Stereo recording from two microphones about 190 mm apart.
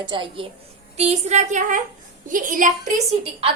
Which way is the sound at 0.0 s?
25° right (ahead or behind).